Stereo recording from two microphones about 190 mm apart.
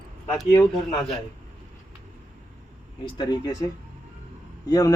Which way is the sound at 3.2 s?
20° left (ahead or behind).